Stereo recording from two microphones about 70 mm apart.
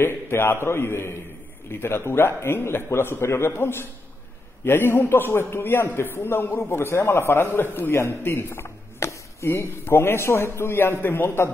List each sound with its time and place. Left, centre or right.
0.0 s a man's voice: left